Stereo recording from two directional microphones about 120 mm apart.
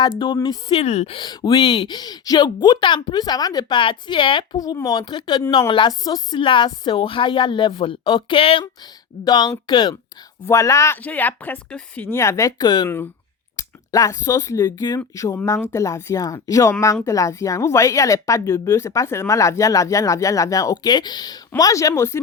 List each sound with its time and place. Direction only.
0.7 s a woman's voice: 60° left (ahead or behind)
1.1 s speech: 40° left (ahead or behind)
8.6 s speech: 35° left (ahead or behind)
10.4 s speech: 25° left (ahead or behind)